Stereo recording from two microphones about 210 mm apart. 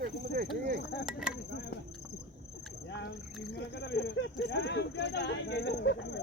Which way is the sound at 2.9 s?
55° left (ahead or behind).